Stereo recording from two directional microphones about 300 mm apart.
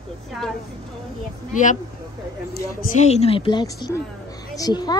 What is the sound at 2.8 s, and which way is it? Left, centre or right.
A child's voice, left.